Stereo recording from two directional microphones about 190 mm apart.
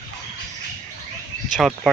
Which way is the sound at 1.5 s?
Centre (ahead or behind).